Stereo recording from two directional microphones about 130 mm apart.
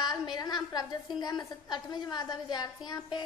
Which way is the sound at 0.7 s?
30° left (ahead or behind).